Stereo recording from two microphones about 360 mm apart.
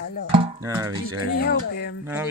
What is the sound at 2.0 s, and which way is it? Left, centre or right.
Speech, centre.